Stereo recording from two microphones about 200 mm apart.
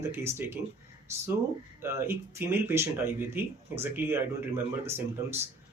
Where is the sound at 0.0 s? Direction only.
10° right (ahead or behind).